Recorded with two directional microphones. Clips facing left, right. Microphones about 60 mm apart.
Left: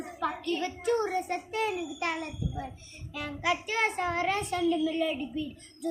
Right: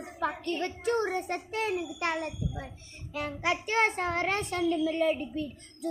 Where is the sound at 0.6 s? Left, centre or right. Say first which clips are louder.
Even; right.